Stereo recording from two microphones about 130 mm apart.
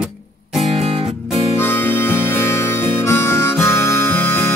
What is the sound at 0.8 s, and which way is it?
Music, 45° right (ahead or behind).